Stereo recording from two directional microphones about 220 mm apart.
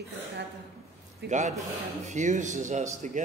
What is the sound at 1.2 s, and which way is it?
Speech, 50° right (ahead or behind).